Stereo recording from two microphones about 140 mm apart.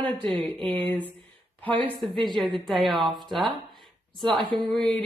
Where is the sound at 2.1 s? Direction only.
30° right (ahead or behind).